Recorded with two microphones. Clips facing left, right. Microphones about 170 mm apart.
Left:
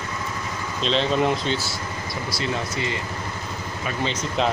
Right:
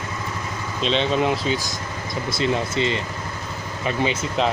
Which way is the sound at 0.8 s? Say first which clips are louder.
Right 1 dB; centre (ahead or behind).